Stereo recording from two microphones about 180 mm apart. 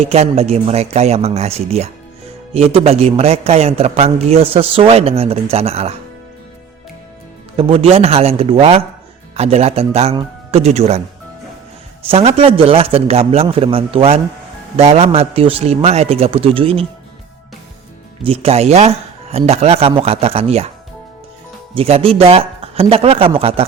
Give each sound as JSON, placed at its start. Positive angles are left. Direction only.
{"t": 0.0, "sound": "a man's voice", "side_deg": -35}
{"t": 7.5, "sound": "a man's voice", "side_deg": -30}
{"t": 12.0, "sound": "a man's voice", "side_deg": -35}
{"t": 18.2, "sound": "a man's voice", "side_deg": -35}
{"t": 21.8, "sound": "a man's voice", "side_deg": -35}